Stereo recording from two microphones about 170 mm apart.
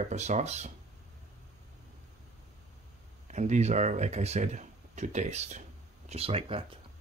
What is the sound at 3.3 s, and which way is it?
A man's voice, 45° right (ahead or behind).